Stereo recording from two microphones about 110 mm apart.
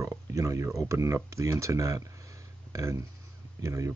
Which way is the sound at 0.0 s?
30° right (ahead or behind).